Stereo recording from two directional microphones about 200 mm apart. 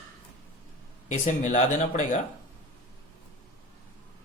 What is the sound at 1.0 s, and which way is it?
Speech, 35° left (ahead or behind).